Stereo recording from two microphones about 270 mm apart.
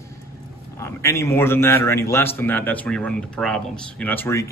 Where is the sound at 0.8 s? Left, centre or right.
Centre.